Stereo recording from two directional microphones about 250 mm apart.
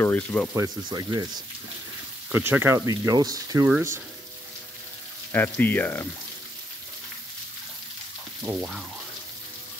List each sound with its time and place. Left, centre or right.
0.0 s speech: centre
0.6 s speech: centre
2.3 s speech: centre
5.3 s speech: centre
8.4 s speech: centre